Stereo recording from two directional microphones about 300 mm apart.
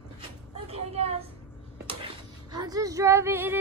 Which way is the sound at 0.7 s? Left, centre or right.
Centre.